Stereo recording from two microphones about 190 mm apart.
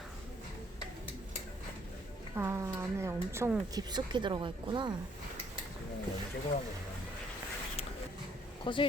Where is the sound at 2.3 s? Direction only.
15° right (ahead or behind).